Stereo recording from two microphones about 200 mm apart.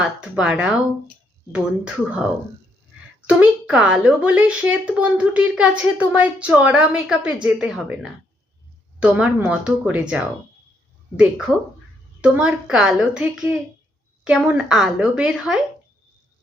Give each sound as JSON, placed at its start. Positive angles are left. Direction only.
{"t": 0.0, "sound": "a woman's voice", "side_deg": -5}
{"t": 12.2, "sound": "a woman's voice", "side_deg": -5}